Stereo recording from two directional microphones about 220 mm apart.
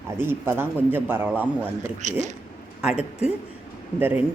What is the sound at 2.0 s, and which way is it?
Speech, 35° right (ahead or behind).